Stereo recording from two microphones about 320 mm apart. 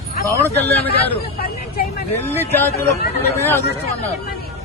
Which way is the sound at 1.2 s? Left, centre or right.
Left.